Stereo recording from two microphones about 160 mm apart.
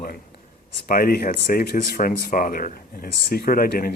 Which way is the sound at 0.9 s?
65° left (ahead or behind).